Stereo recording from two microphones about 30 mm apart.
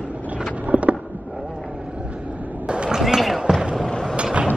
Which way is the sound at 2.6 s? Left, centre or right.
Right.